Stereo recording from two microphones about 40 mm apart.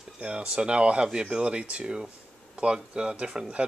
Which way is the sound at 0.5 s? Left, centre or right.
Right.